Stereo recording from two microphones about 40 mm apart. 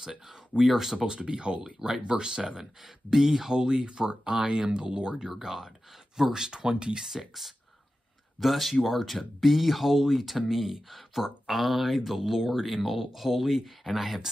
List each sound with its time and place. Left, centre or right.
0.6 s speech: centre
0.9 s speech: right
2.8 s speech: centre
5.3 s speech: centre
7.1 s speech: centre